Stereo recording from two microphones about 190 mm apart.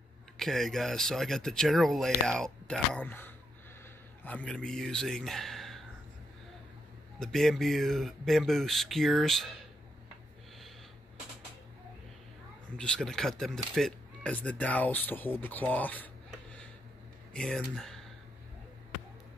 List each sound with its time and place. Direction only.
0.4 s speech: centre (ahead or behind)
7.2 s speech: centre (ahead or behind)
12.7 s speech: 5° left (ahead or behind)